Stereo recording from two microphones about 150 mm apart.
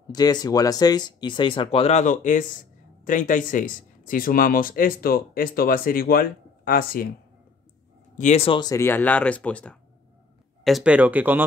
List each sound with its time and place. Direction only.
0.0 s speech: 25° left (ahead or behind); by 7.1 s 80° left
8.2 s speech: 50° left (ahead or behind)
8.5 s speech: 25° left (ahead or behind); by 9.8 s 10° left (ahead or behind)
10.6 s speech: 5° right (ahead or behind)